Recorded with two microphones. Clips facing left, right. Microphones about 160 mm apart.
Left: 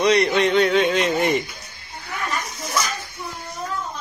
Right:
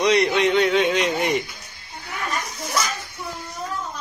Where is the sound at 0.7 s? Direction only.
15° right (ahead or behind).